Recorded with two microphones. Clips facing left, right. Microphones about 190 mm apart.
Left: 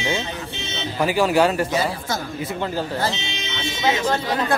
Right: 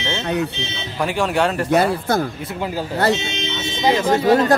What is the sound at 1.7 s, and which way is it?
Speech, 60° right (ahead or behind).